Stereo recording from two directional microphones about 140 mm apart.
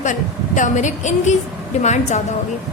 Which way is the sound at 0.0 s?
65° left (ahead or behind).